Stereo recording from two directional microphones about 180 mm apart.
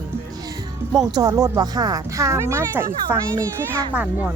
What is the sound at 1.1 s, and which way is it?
Speech, 20° right (ahead or behind).